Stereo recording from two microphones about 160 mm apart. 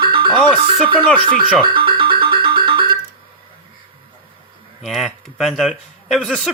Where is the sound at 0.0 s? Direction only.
30° right (ahead or behind).